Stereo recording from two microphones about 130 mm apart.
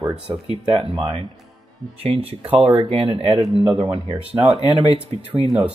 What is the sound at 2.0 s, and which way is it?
Speech, 50° right (ahead or behind).